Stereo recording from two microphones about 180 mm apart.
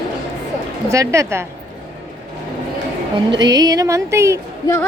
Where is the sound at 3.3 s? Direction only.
20° right (ahead or behind).